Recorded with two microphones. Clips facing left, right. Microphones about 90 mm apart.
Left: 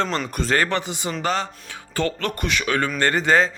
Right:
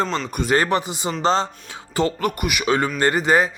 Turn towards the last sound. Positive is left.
turn(degrees=-15)  # may be behind; listen again after turning